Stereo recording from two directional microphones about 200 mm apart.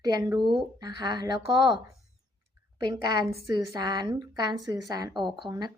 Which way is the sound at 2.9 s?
20° right (ahead or behind).